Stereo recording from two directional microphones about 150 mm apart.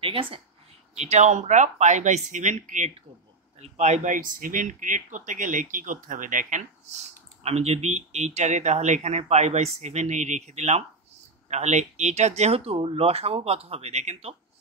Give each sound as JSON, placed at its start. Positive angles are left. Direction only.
{"t": 0.0, "sound": "speech", "side_deg": -35}
{"t": 0.9, "sound": "speech", "side_deg": -50}
{"t": 7.4, "sound": "speech", "side_deg": -45}